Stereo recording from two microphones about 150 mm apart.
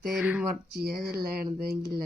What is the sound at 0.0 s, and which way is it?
Speech, 5° right (ahead or behind).